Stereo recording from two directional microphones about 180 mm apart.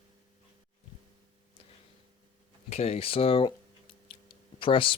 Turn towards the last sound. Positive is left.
turn(degrees=30)  # may be behind; listen again after turning